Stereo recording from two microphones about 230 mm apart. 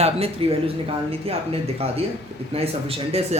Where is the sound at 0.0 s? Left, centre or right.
Right.